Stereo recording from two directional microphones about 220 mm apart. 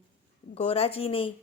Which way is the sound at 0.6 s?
25° left (ahead or behind).